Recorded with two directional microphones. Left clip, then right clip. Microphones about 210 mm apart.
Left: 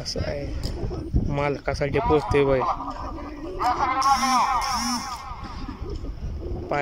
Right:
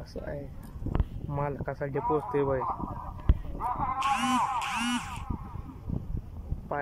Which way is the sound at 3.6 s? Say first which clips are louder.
Left 8 dB; 50° left (ahead or behind).